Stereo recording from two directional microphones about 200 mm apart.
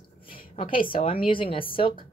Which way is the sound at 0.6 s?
25° left (ahead or behind).